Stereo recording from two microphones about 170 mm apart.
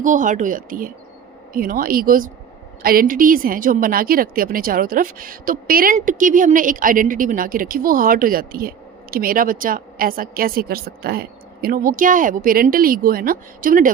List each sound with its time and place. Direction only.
0.0 s a woman's voice: 50° right (ahead or behind)